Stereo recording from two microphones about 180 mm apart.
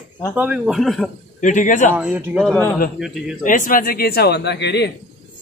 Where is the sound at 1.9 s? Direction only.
10° right (ahead or behind).